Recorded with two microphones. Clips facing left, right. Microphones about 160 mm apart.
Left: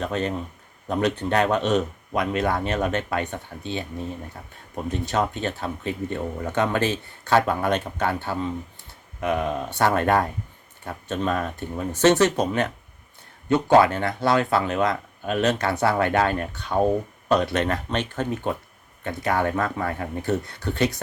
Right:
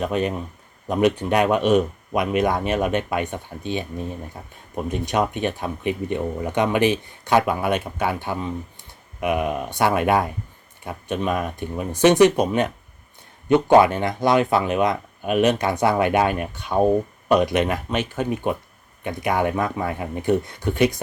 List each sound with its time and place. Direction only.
0.0 s speech: 15° right (ahead or behind)